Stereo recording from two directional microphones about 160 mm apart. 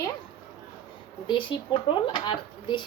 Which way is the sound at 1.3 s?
30° left (ahead or behind).